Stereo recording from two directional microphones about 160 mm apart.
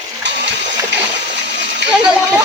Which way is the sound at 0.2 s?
90° right.